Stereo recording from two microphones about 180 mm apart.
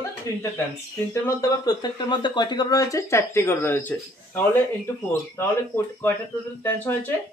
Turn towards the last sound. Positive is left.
turn(degrees=10)  # may be behind; listen again after turning